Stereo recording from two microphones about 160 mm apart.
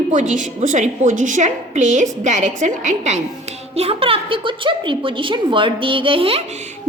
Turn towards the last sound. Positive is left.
turn(degrees=-45)  # may be behind; listen again after turning